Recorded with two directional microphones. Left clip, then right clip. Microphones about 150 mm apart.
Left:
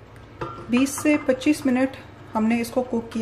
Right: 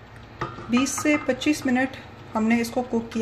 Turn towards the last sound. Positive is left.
turn(degrees=5)  # may be behind; listen again after turning